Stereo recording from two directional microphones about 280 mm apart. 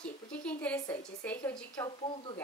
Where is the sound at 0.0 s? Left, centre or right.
Centre.